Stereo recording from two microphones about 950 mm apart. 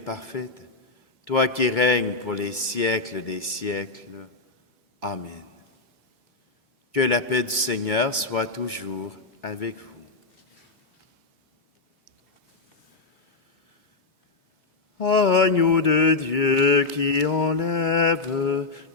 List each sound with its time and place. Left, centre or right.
0.3 s mantra: left
4.9 s a man's voice: left
6.9 s mantra: left
14.9 s mantra: left